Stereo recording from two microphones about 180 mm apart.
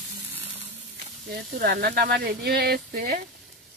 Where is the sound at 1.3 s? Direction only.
60° right (ahead or behind).